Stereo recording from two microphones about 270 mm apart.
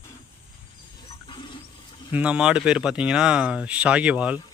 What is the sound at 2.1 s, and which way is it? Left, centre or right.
Speech, centre.